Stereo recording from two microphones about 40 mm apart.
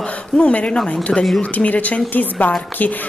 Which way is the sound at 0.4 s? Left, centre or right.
Left.